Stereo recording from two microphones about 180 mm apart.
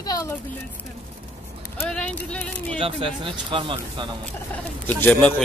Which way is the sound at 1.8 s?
5° left (ahead or behind).